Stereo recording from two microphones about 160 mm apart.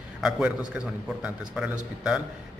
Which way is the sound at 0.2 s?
5° right (ahead or behind).